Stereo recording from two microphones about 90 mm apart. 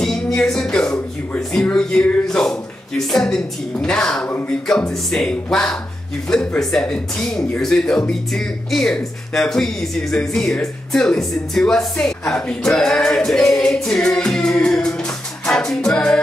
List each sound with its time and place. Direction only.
0.4 s a woman's voice: 10° left (ahead or behind)
15.4 s music: 5° left (ahead or behind)